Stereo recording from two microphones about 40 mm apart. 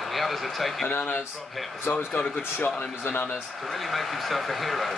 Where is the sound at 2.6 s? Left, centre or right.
Left.